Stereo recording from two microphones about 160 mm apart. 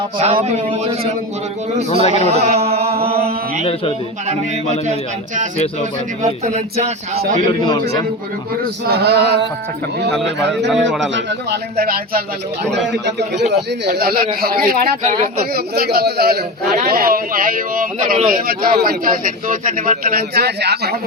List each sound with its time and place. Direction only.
0.4 s a man's voice: 40° right (ahead or behind)
1.9 s a man's voice: 45° left (ahead or behind)
2.3 s a sound: 40° right (ahead or behind)
6.2 s a sound: 45° right (ahead or behind)
7.6 s a man's voice: 30° left (ahead or behind)
8.9 s male singing: 90° right
10.7 s a man's voice: centre (ahead or behind)
11.3 s a man's voice: 80° right
12.9 s male singing: 90° right
13.5 s a man's voice: 85° right